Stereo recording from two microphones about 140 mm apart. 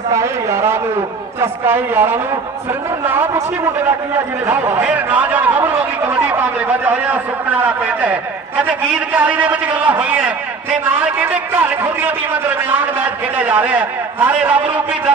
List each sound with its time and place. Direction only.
0.1 s a sound: 20° right (ahead or behind)
1.4 s a man's voice: 15° right (ahead or behind)
4.5 s a man's voice: 15° right (ahead or behind)